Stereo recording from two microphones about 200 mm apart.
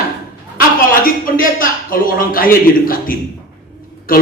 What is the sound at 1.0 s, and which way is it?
A man's voice, 45° left (ahead or behind).